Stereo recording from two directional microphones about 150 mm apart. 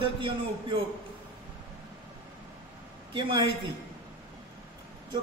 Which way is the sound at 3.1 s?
35° right (ahead or behind).